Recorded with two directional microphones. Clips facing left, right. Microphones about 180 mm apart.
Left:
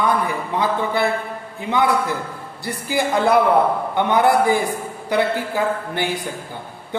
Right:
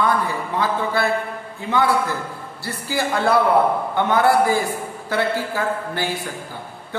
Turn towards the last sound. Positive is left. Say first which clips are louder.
# left 2 dB
turn(degrees=15)  # may be behind; listen again after turning